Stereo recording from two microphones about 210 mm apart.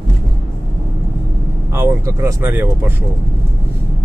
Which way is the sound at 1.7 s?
15° right (ahead or behind).